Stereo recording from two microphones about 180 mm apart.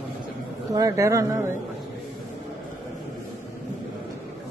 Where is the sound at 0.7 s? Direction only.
20° right (ahead or behind).